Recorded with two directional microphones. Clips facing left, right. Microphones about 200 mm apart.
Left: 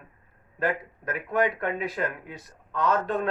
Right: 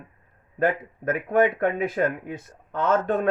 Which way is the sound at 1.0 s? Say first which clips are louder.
Right 5 dB; 50° right (ahead or behind).